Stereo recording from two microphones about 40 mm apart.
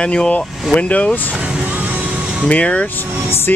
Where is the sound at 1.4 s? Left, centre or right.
Right.